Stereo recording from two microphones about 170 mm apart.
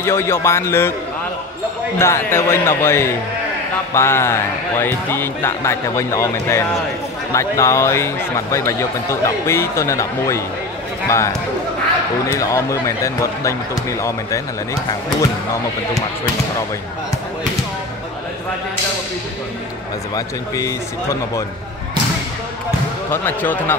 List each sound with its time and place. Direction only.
0.0 s speech: 15° left (ahead or behind)
2.0 s speech: 15° left (ahead or behind)
20.2 s speech: 20° left (ahead or behind)
23.1 s speech: 10° left (ahead or behind)